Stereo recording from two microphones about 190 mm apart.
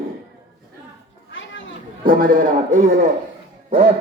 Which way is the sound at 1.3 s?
80° left.